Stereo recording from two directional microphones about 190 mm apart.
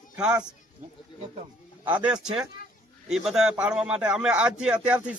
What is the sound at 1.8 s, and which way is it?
A man's voice, 5° right (ahead or behind).